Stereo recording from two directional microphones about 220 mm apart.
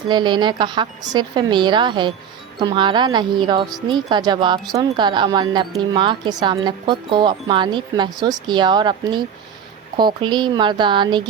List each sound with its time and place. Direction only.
0.1 s speech: 20° right (ahead or behind)